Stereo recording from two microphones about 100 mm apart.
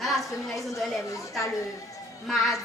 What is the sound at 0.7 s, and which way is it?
Speech, 30° left (ahead or behind).